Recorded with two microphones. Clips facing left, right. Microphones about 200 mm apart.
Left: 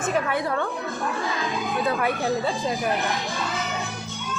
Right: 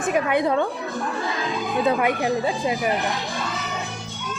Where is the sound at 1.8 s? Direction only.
20° right (ahead or behind).